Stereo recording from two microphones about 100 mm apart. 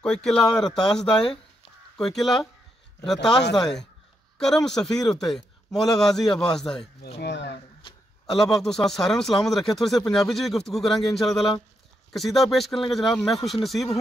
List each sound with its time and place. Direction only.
0.0 s speech: 5° left (ahead or behind)
7.8 s a sound: 55° left (ahead or behind)
8.3 s speech: 5° left (ahead or behind)